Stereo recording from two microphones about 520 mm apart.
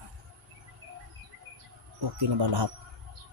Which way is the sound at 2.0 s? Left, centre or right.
Right.